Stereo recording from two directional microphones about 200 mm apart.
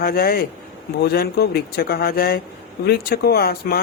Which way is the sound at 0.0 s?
50° left (ahead or behind).